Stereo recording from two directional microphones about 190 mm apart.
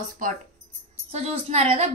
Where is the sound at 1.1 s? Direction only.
35° right (ahead or behind).